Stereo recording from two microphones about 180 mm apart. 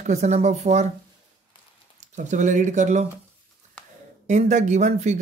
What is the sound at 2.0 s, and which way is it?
Speech, 45° right (ahead or behind).